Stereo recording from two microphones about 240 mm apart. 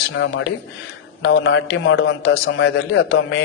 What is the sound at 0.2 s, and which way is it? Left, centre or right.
A man's voice, left.